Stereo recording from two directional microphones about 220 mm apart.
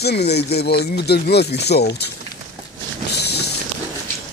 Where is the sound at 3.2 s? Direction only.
50° left (ahead or behind).